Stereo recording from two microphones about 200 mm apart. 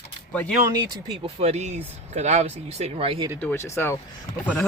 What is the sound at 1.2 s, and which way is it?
Speech, 30° right (ahead or behind).